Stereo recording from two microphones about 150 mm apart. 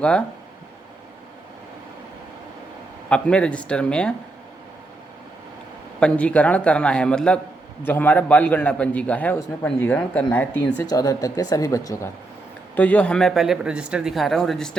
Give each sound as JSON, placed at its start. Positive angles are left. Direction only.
{"t": 0.0, "sound": "a man's voice", "side_deg": 5}
{"t": 3.1, "sound": "a man's voice", "side_deg": 5}
{"t": 6.0, "sound": "a man's voice", "side_deg": 5}
{"t": 10.8, "sound": "speech", "side_deg": 25}
{"t": 12.7, "sound": "speech", "side_deg": 10}